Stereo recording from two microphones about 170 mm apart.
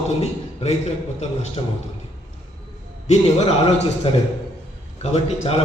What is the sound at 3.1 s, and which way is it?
Speech, 40° left (ahead or behind).